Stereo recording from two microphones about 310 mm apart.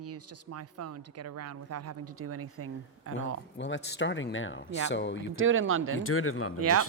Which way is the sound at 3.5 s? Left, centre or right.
Left.